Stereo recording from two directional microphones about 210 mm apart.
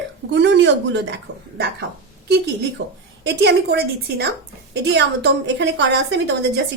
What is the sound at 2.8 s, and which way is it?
A woman's voice, 55° right (ahead or behind).